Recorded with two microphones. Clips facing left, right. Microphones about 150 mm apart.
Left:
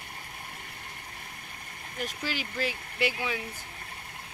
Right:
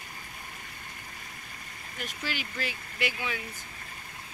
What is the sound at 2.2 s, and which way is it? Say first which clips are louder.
Speech: left 2 dB; 30° left (ahead or behind).